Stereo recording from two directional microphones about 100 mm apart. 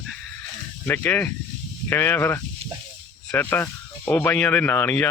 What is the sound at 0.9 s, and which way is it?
Speech, 20° left (ahead or behind).